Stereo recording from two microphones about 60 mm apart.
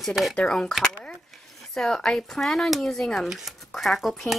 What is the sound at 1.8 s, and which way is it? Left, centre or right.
Speech, centre.